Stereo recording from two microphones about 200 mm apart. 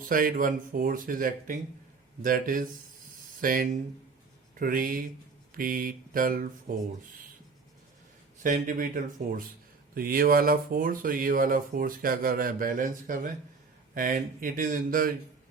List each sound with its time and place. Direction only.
0.0 s speech: 45° right (ahead or behind)
8.4 s speech: 40° right (ahead or behind)